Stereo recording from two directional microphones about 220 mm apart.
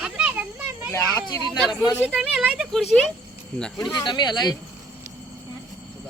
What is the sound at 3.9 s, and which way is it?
Speech, 20° left (ahead or behind).